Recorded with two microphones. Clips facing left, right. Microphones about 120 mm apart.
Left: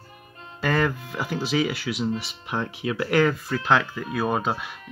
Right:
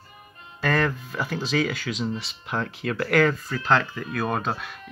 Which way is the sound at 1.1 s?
10° left (ahead or behind).